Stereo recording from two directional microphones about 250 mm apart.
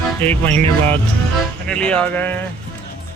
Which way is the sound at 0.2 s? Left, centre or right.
Centre.